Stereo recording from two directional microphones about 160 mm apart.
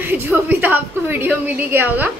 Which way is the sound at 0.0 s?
10° right (ahead or behind).